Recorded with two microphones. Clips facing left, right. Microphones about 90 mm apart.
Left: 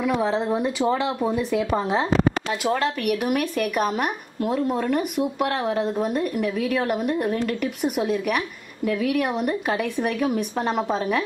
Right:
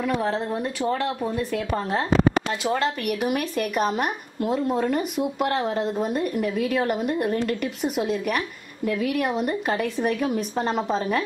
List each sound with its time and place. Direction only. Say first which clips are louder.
0.0 s speech: left 2 dB; 5° left (ahead or behind)
2.6 s a woman's voice: left 5 dB; centre (ahead or behind)